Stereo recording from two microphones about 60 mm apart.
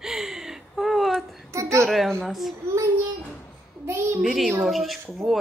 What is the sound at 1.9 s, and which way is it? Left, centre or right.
Speech, centre.